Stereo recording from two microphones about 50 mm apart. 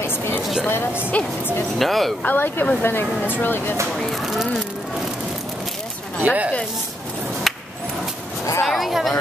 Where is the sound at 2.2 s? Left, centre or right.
Left.